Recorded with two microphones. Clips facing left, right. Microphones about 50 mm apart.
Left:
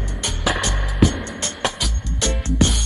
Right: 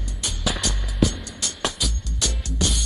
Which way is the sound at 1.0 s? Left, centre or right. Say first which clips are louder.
Left 5 dB; left.